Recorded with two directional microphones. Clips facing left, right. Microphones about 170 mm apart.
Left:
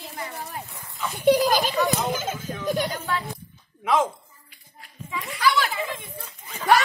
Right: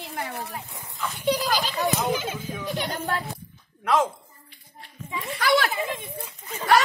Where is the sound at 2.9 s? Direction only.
45° right (ahead or behind).